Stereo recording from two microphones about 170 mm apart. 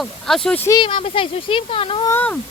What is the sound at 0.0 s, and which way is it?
Speech, centre (ahead or behind).